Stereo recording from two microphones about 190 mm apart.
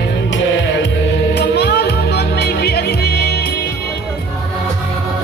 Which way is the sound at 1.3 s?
60° left (ahead or behind).